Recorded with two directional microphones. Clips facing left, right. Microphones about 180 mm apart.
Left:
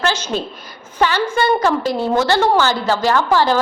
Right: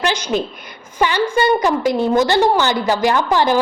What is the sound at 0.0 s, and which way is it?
A woman's voice, 15° right (ahead or behind).